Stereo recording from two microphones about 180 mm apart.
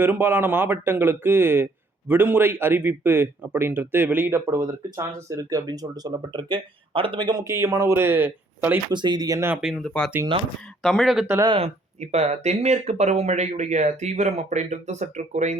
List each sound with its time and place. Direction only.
0.0 s speech: 10° right (ahead or behind)
8.9 s speech: 25° right (ahead or behind)
9.6 s speech: centre (ahead or behind)
11.3 s speech: 20° right (ahead or behind)
11.5 s speech: 35° right (ahead or behind)